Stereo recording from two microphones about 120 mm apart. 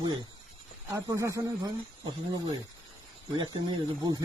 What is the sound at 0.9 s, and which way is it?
Speech, 25° right (ahead or behind).